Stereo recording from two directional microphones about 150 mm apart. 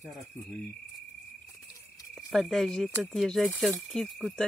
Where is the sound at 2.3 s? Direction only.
Centre (ahead or behind).